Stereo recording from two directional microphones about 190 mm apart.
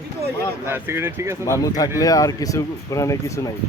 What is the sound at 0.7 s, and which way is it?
Speech, 10° right (ahead or behind).